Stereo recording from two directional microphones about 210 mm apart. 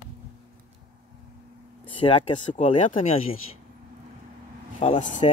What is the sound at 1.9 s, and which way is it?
Speech, 25° left (ahead or behind).